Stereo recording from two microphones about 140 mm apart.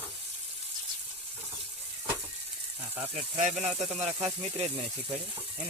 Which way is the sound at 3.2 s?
55° right (ahead or behind).